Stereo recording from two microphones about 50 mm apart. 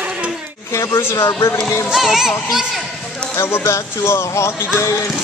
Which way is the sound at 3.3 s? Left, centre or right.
Left.